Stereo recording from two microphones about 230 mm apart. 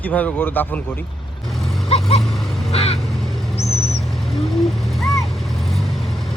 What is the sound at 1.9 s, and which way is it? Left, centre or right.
Vehicle, left.